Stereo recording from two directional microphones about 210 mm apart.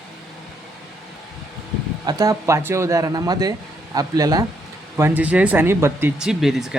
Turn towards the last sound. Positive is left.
turn(degrees=0)  # may be behind; listen again after turning